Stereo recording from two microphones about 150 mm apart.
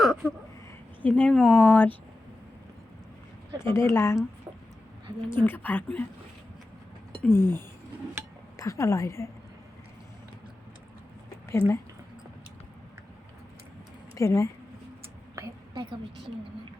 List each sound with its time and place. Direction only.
0.0 s a sound: centre (ahead or behind)
1.0 s speech: 10° left (ahead or behind)
3.7 s speech: 15° left (ahead or behind)
5.3 s speech: 15° left (ahead or behind)
7.3 s a woman's voice: 15° left (ahead or behind)
11.6 s speech: 35° right (ahead or behind)
14.2 s a woman's voice: 20° left (ahead or behind)
15.4 s a sound: 25° right (ahead or behind)